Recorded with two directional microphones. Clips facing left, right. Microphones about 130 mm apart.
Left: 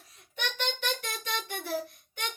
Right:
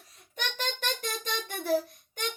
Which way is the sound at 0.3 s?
40° right (ahead or behind).